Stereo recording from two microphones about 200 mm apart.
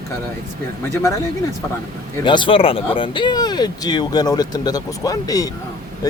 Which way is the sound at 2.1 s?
20° left (ahead or behind).